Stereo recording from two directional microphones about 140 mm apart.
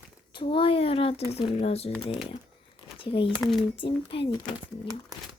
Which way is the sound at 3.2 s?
Centre (ahead or behind).